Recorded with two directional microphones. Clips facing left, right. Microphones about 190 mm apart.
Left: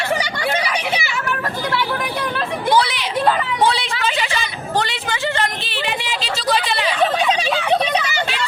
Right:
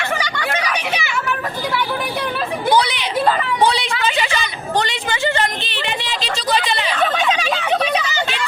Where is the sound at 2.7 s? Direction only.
Centre (ahead or behind).